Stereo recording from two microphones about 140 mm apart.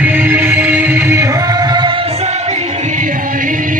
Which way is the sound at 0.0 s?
10° right (ahead or behind).